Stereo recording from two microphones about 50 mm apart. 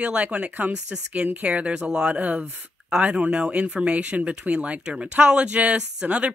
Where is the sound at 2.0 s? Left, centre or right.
Right.